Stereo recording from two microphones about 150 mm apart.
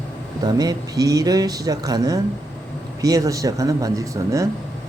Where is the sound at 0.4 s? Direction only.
25° right (ahead or behind).